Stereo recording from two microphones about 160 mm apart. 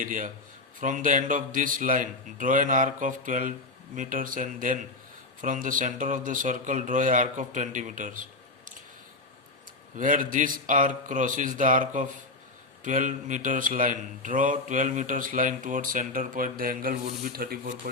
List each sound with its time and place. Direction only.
0.0 s a man's voice: 55° right (ahead or behind)
10.0 s a man's voice: 55° right (ahead or behind)